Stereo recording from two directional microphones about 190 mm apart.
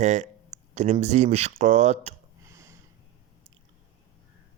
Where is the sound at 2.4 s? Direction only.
15° right (ahead or behind).